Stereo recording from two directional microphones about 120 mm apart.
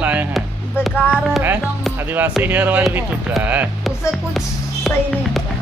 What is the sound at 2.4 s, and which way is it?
Music, 15° right (ahead or behind).